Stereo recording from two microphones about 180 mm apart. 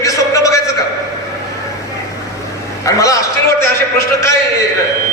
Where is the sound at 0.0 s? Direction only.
20° left (ahead or behind).